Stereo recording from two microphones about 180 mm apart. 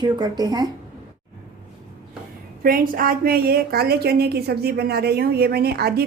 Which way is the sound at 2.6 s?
50° right (ahead or behind).